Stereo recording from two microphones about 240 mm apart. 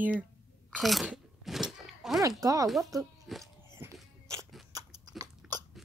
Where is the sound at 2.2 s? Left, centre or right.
Centre.